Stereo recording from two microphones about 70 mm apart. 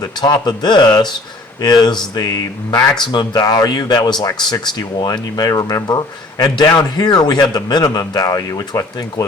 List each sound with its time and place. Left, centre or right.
0.0 s a man's voice: left
0.4 s speech: left
1.6 s speech: left
2.1 s speech: left
3.1 s speech: left
3.4 s a man's voice: left
6.4 s a man's voice: left